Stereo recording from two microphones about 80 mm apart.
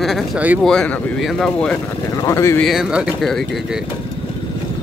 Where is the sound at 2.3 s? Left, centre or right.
Left.